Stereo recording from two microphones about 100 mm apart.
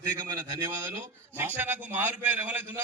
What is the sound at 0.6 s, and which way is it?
A man's voice, 30° right (ahead or behind).